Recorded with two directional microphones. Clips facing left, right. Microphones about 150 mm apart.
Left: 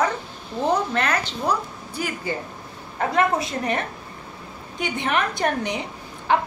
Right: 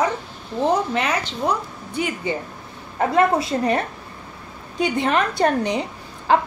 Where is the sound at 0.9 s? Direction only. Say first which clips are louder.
Right 1 dB; 10° right (ahead or behind).